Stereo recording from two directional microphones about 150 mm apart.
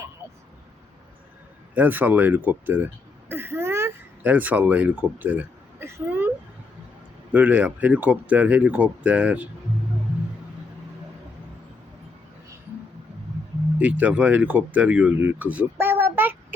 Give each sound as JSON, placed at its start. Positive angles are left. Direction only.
{"t": 1.7, "sound": "speech", "side_deg": -10}
{"t": 5.8, "sound": "a sound", "side_deg": -15}
{"t": 7.3, "sound": "speech", "side_deg": -10}
{"t": 13.7, "sound": "speech", "side_deg": -10}